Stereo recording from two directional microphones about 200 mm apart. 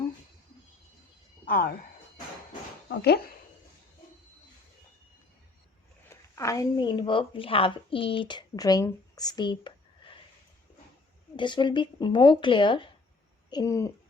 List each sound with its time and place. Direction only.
1.5 s speech: 50° left (ahead or behind)
2.9 s speech: 55° left (ahead or behind)
6.1 s a woman's voice: 15° left (ahead or behind)
11.3 s speech: 25° left (ahead or behind)